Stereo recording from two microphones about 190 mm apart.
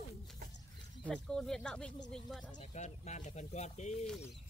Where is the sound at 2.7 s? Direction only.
35° left (ahead or behind).